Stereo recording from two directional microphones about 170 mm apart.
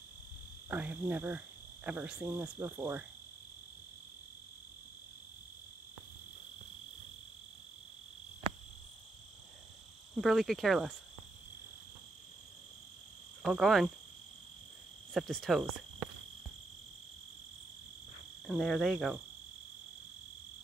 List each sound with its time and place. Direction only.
0.7 s insect: 10° right (ahead or behind)
8.4 s cricket: 30° right (ahead or behind)
10.2 s speech: centre (ahead or behind)
13.4 s speech: centre (ahead or behind)
15.1 s speech: centre (ahead or behind)
18.5 s speech: centre (ahead or behind)